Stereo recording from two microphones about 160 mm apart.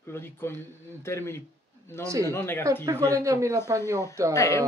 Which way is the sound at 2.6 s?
20° right (ahead or behind).